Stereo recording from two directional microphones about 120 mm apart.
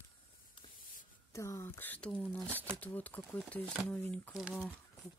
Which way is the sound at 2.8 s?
15° left (ahead or behind).